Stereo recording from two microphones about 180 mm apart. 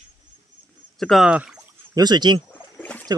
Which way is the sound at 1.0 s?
Centre (ahead or behind).